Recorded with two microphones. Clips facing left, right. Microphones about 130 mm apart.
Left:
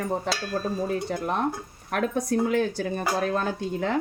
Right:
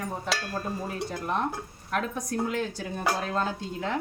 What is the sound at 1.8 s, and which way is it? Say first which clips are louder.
Stir: left 5 dB; 60° left (ahead or behind).